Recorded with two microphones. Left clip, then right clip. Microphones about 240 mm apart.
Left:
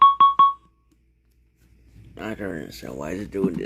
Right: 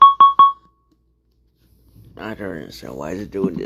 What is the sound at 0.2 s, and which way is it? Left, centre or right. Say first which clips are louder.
Keyboard: right 5 dB; left.